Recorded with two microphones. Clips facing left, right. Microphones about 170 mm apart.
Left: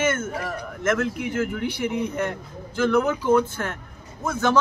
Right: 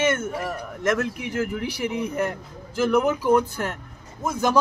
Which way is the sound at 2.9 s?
15° right (ahead or behind).